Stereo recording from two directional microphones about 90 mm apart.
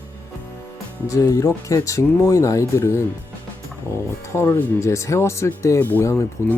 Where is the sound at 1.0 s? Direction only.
40° left (ahead or behind).